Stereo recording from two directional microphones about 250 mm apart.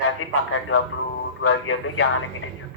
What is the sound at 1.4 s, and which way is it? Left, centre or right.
Speech, left.